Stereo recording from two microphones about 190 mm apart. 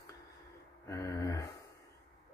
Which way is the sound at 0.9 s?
15° left (ahead or behind).